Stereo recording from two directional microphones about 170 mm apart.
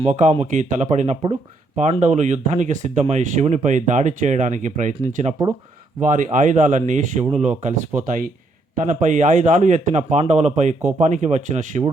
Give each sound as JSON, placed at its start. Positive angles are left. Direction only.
{"t": 0.0, "sound": "speech", "side_deg": -45}